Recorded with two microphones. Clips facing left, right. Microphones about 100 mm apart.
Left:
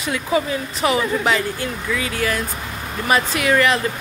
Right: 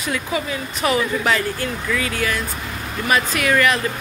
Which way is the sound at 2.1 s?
30° left (ahead or behind).